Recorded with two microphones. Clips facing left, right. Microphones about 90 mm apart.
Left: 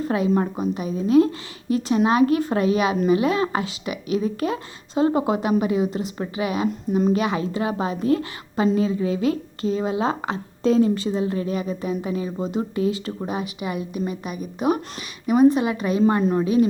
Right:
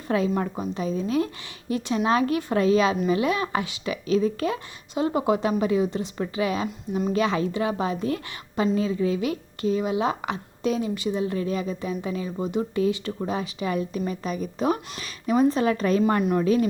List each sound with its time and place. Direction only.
0.0 s a woman's voice: 25° left (ahead or behind)